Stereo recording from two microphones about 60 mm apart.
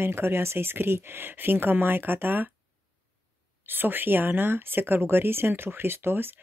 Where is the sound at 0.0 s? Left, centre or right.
Right.